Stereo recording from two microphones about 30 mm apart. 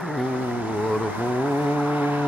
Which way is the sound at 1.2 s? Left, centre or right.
Right.